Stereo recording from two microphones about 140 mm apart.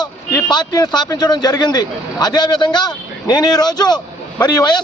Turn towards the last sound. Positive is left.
turn(degrees=30)  # may be behind; listen again after turning